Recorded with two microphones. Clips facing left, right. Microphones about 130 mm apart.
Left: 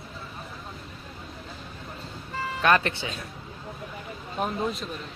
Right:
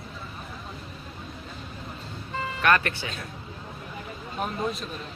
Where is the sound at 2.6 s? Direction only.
20° left (ahead or behind).